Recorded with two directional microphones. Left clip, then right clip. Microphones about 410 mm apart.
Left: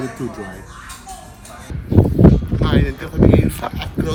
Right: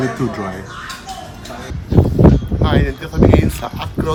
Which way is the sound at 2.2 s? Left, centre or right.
Centre.